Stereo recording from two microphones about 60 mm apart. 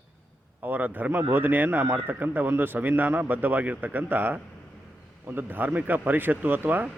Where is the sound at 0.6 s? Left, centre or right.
Right.